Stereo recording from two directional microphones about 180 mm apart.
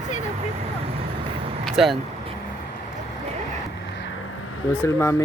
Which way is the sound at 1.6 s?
Centre (ahead or behind).